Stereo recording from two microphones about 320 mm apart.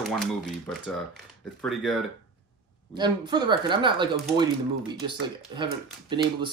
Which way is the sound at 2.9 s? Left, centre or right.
Centre.